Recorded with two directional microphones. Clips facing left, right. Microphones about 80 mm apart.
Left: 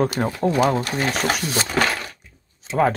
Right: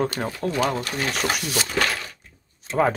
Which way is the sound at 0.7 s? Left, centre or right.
Left.